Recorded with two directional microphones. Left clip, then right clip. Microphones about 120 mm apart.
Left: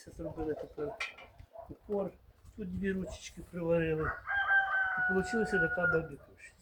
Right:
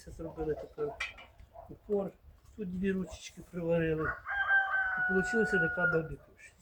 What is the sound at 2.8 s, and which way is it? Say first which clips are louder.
Chicken: right 1 dB; 30° right (ahead or behind).